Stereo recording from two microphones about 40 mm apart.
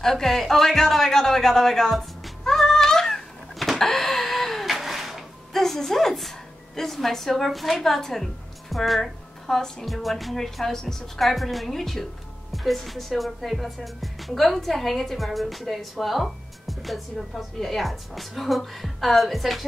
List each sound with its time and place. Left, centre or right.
0.0 s speech: centre
3.5 s a sound: centre
5.5 s a woman's voice: centre